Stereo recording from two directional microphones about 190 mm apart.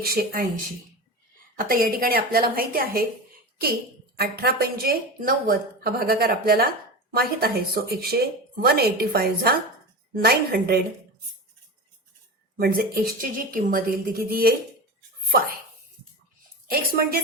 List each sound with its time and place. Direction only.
0.0 s a woman's voice: 50° right (ahead or behind)
1.5 s a woman's voice: 50° right (ahead or behind)
4.2 s a woman's voice: 55° right (ahead or behind)
12.5 s a woman's voice: 55° right (ahead or behind)
16.6 s a woman's voice: 50° right (ahead or behind)